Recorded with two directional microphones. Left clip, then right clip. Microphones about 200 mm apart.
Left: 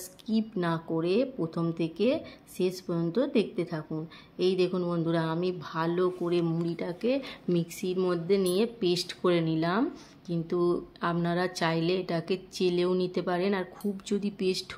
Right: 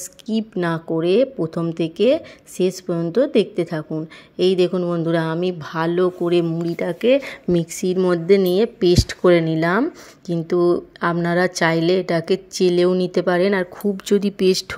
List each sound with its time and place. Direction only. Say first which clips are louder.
0.3 s speech: right 8 dB; 35° right (ahead or behind)